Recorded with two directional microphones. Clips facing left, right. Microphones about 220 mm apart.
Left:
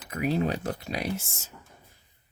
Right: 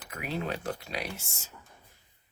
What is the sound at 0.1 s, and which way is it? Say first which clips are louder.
Speech: left 7 dB; 40° left (ahead or behind).